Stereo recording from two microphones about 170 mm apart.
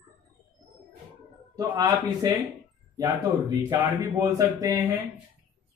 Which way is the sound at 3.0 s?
20° right (ahead or behind).